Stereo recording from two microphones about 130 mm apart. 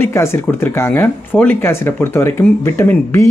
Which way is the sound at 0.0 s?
20° left (ahead or behind).